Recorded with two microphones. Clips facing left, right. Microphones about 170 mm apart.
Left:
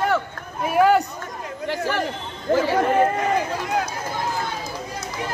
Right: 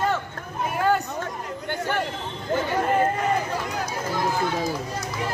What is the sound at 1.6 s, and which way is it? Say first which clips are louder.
Speech: left 3 dB; 90° left.